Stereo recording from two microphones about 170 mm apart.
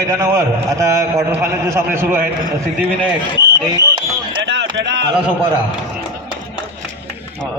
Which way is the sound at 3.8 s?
30° right (ahead or behind).